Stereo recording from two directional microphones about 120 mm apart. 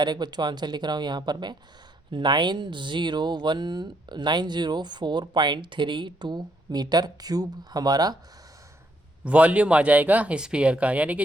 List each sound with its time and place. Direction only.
0.0 s speech: 35° right (ahead or behind)
9.2 s speech: 10° right (ahead or behind)